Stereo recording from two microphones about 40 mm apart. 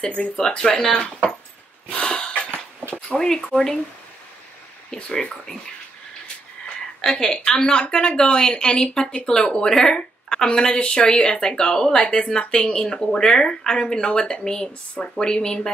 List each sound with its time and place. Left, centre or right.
0.4 s a woman's voice: left
2.0 s a sound: left
3.1 s speech: centre
5.1 s speech: centre
7.0 s a woman's voice: centre
7.3 s a woman's voice: left